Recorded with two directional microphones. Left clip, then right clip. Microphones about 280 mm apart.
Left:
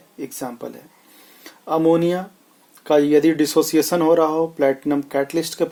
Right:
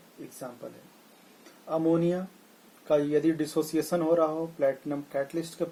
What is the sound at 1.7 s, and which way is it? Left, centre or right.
Speech, left.